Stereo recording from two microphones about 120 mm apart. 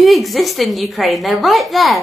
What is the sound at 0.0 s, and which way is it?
Speech, centre (ahead or behind).